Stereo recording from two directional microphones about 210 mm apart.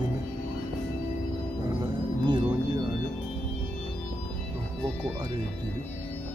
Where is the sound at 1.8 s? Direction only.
20° right (ahead or behind).